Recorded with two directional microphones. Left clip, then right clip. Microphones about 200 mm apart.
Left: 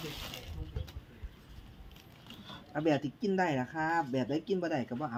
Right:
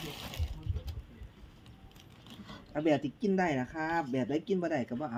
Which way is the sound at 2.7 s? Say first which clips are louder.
Right 1 dB; 5° left (ahead or behind).